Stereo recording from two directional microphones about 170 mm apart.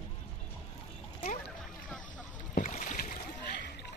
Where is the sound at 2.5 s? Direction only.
45° left (ahead or behind).